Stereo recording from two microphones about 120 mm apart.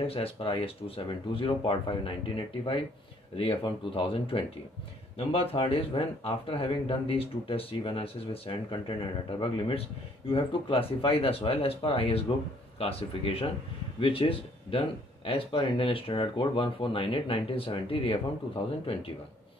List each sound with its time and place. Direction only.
0.0 s speech: 50° left (ahead or behind)